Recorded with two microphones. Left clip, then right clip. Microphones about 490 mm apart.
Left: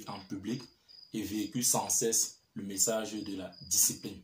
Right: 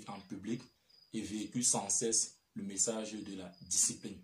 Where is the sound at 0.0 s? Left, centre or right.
Right.